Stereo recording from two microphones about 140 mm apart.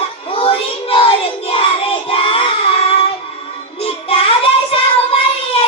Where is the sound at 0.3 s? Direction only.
40° left (ahead or behind).